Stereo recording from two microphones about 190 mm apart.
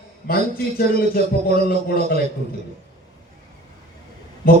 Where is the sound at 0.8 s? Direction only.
55° left (ahead or behind).